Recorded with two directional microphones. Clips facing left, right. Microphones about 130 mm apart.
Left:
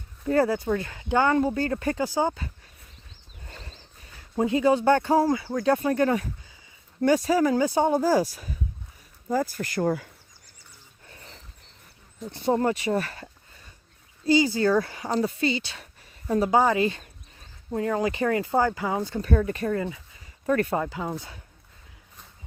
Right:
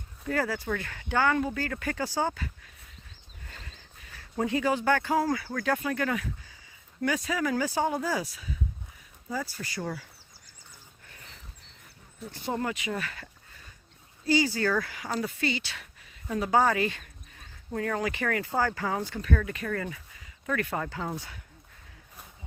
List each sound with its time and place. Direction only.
0.3 s speech: 25° left (ahead or behind)
2.0 s speech: 20° left (ahead or behind)
3.4 s a sound: 30° left (ahead or behind)
4.2 s speech: 20° left (ahead or behind); by 10.1 s 50° left (ahead or behind)
11.0 s dog: 30° left (ahead or behind)
12.3 s speech: 30° left (ahead or behind)
14.3 s speech: 20° left (ahead or behind)
16.5 s speech: 15° left (ahead or behind)
19.2 s speech: 35° left (ahead or behind)
19.7 s speech: 20° left (ahead or behind)
20.5 s speech: 30° left (ahead or behind)
20.8 s speech: 15° left (ahead or behind)